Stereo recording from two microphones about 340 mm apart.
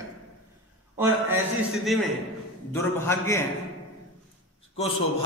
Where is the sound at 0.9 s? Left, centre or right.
Centre.